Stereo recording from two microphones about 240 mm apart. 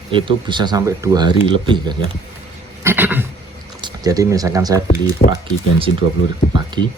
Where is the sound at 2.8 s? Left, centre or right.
Centre.